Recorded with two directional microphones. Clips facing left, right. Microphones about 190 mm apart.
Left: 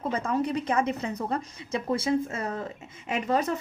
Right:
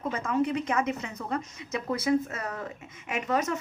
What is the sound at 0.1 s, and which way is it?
A woman's voice, 35° left (ahead or behind).